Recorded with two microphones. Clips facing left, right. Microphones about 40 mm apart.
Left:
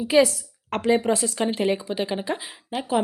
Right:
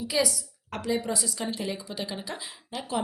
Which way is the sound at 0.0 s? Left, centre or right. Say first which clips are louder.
Left 9 dB; left.